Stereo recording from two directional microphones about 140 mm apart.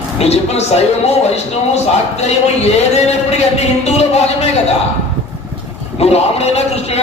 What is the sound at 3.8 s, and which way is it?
Speech, 50° left (ahead or behind).